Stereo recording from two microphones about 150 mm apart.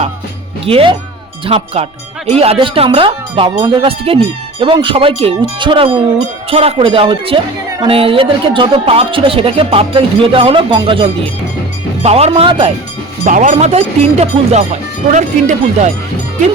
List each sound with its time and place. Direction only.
0.6 s speech: 40° right (ahead or behind)
13.2 s speech: 60° right (ahead or behind)